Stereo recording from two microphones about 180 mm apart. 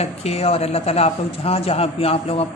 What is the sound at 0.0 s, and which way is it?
A man's voice, 35° left (ahead or behind).